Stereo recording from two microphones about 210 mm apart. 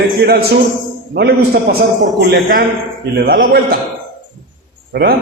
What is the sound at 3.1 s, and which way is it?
Speech, 50° right (ahead or behind).